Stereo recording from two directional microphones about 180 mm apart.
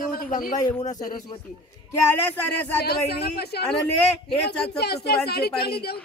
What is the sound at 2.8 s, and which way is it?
A man's voice, 60° left (ahead or behind).